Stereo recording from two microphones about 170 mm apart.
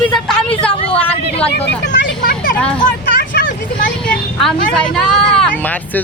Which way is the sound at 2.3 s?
55° left (ahead or behind).